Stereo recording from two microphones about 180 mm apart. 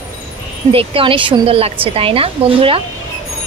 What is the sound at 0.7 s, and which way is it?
Speech, 30° right (ahead or behind).